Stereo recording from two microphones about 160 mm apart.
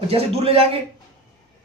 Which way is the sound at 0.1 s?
40° right (ahead or behind).